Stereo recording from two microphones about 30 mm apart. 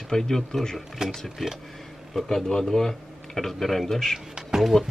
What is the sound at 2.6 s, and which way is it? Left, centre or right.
Speech, centre.